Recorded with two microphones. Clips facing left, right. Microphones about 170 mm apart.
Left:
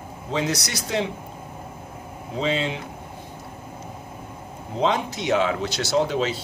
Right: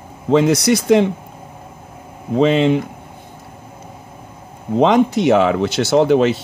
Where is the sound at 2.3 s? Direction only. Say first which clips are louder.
Right 12 dB; 65° right (ahead or behind).